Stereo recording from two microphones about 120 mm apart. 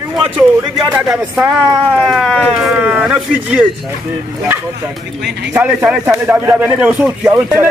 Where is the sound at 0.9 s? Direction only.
10° right (ahead or behind).